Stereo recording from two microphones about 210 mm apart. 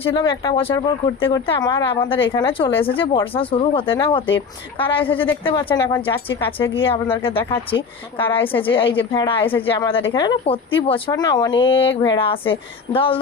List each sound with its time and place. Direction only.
0.0 s speech: 25° left (ahead or behind)
6.7 s speech: 25° left (ahead or behind)